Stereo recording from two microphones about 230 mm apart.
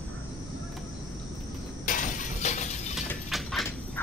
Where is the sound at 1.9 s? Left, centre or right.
Left.